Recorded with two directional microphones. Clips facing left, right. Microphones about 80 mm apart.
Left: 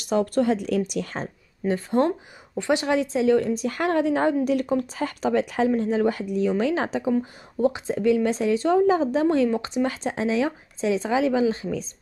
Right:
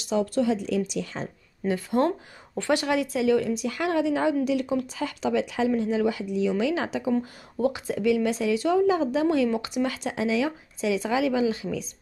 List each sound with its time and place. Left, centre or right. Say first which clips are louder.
0.0 s a woman's voice: left 2 dB; left
1.7 s a woman's voice: left 2 dB; left
3.4 s a woman's voice: left 3 dB; left